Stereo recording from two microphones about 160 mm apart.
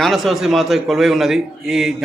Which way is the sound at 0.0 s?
Centre (ahead or behind).